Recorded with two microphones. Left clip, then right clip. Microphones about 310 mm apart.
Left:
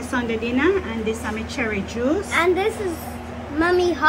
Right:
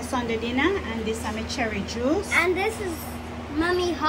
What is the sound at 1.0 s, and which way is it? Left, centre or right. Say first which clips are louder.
Speech: left 3 dB; left.